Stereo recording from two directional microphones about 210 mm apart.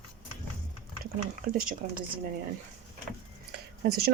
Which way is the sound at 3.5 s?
45° right (ahead or behind).